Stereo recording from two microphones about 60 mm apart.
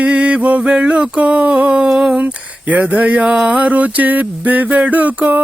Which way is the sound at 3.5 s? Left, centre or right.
Right.